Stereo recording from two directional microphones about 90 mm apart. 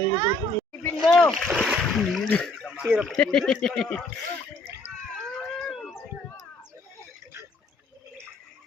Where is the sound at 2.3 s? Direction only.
10° left (ahead or behind).